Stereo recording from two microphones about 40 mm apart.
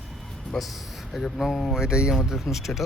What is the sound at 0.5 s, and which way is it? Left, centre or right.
A man's voice, centre.